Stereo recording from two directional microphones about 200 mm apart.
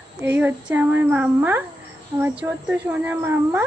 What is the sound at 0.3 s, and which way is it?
A woman's voice, 10° right (ahead or behind).